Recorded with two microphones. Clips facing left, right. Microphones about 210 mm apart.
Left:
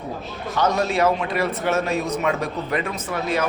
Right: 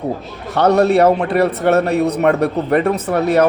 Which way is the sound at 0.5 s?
65° right (ahead or behind).